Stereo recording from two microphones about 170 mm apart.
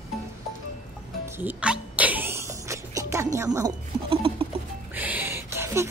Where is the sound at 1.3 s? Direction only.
10° right (ahead or behind).